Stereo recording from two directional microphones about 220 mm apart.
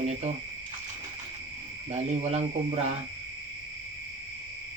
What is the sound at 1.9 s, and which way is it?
Speech, 30° right (ahead or behind).